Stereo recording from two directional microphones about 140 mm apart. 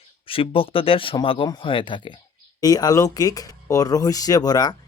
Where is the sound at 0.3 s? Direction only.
40° left (ahead or behind).